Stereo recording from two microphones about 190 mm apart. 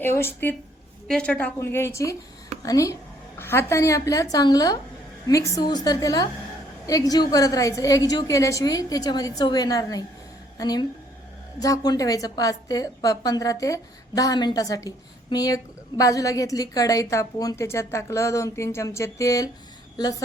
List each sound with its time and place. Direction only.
0.0 s a woman's voice: 10° left (ahead or behind)